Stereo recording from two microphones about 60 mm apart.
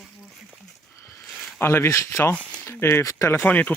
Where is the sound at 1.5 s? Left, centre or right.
Left.